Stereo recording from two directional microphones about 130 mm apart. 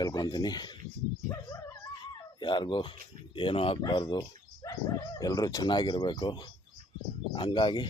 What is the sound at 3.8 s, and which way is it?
Speech, 35° left (ahead or behind).